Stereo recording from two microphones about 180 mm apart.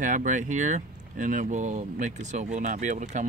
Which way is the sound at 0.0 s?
45° right (ahead or behind).